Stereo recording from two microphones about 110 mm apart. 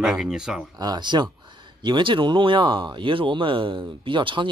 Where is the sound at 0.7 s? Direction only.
40° right (ahead or behind).